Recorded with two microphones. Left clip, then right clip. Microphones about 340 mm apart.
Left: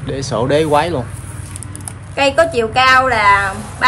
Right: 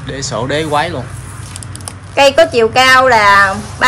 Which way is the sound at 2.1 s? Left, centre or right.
Centre.